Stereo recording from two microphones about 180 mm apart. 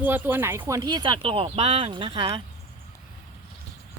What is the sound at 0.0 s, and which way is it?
Speech, 10° right (ahead or behind).